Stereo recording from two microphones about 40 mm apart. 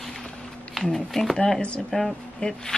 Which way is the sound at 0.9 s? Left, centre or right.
Centre.